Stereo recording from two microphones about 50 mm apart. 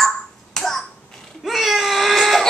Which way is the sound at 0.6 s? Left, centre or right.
Centre.